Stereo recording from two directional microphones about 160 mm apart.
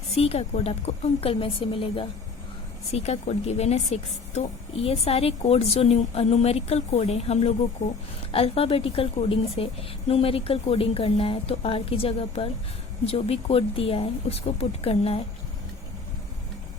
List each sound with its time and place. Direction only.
0.1 s a woman's voice: 40° left (ahead or behind)